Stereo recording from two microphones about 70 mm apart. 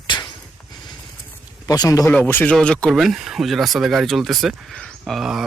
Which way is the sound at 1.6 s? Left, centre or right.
Left.